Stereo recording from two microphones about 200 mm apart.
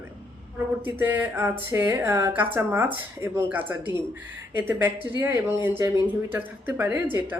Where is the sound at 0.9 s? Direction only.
10° right (ahead or behind).